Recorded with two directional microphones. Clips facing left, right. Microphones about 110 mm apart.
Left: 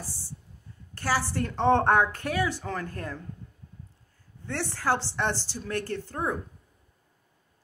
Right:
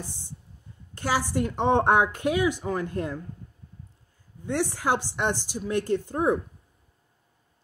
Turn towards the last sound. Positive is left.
turn(degrees=-20)  # may be behind; listen again after turning